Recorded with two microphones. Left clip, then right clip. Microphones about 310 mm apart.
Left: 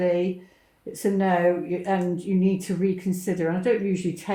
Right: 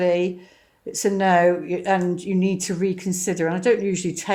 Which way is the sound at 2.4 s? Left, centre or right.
Right.